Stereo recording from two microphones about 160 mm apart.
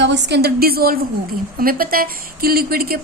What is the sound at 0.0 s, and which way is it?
A woman's voice, 90° right.